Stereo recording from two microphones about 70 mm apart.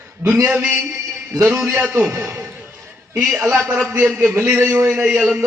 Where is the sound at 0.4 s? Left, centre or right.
Right.